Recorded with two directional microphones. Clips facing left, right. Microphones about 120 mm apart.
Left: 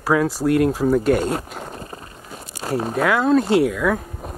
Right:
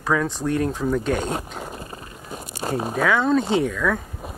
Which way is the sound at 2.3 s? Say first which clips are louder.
Right 1 dB; 20° right (ahead or behind).